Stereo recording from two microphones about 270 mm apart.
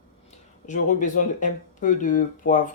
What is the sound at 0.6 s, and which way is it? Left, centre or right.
Speech, left.